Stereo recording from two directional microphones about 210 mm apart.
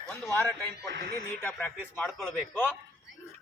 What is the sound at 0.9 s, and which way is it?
Speech, 55° right (ahead or behind).